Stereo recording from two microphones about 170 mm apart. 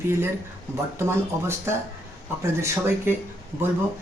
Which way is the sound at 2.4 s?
15° right (ahead or behind).